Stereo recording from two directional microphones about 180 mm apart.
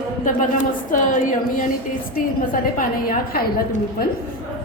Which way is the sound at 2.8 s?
55° left (ahead or behind).